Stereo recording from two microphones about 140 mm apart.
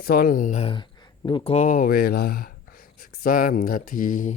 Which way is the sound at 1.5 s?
70° left (ahead or behind).